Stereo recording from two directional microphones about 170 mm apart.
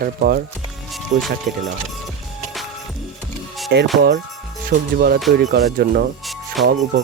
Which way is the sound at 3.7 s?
80° right.